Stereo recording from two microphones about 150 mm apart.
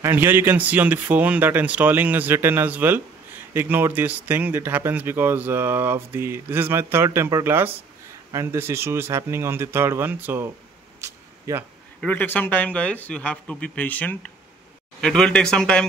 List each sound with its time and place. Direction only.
0.0 s speech: 15° right (ahead or behind)
11.0 s a sound: 20° right (ahead or behind)
12.0 s speech: 10° left (ahead or behind)